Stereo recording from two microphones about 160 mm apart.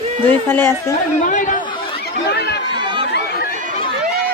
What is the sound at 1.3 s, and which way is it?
Chatter, 50° left (ahead or behind).